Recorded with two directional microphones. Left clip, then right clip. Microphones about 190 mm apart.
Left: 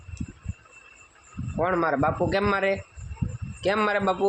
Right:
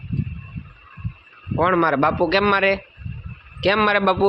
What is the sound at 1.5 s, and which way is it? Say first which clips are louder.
Speech: right 6 dB; 30° right (ahead or behind).